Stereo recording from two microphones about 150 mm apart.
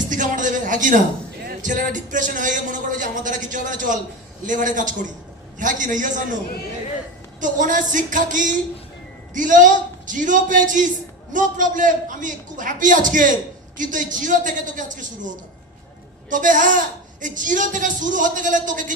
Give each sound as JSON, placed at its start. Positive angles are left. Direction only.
{"t": 0.1, "sound": "a man's voice", "side_deg": -60}
{"t": 7.3, "sound": "speech", "side_deg": -60}
{"t": 16.3, "sound": "speech", "side_deg": -60}